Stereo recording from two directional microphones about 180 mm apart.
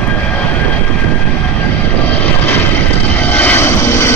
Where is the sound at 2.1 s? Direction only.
10° left (ahead or behind).